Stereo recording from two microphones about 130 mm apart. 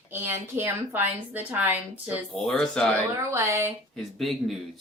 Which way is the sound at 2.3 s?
Centre (ahead or behind).